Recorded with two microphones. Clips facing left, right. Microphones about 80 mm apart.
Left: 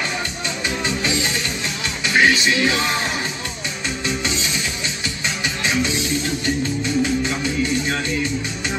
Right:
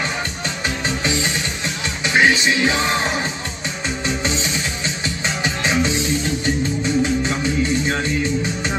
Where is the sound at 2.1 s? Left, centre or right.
Right.